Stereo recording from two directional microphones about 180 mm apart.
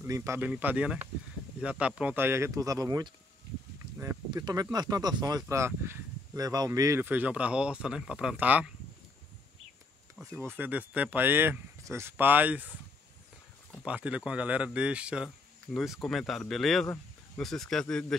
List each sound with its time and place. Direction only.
0.0 s speech: 15° right (ahead or behind)
10.3 s speech: 10° right (ahead or behind)
13.8 s speech: 5° right (ahead or behind)